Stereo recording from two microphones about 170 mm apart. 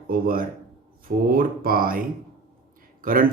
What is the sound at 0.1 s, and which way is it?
Speech, 60° right (ahead or behind).